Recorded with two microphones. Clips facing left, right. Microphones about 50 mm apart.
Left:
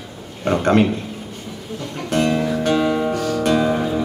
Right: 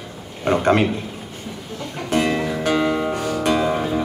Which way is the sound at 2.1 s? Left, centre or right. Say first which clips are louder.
Left 1 dB; centre.